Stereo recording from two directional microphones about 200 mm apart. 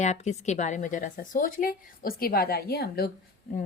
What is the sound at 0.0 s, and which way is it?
Speech, 35° left (ahead or behind).